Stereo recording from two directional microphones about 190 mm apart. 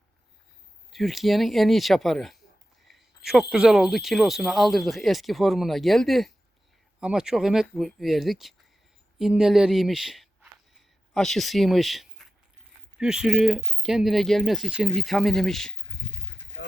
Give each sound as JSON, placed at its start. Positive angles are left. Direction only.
{"t": 0.9, "sound": "speech", "side_deg": 0}
{"t": 3.5, "sound": "speech", "side_deg": 0}